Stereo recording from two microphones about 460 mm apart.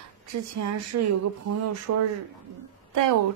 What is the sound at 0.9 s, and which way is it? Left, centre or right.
Speech, right.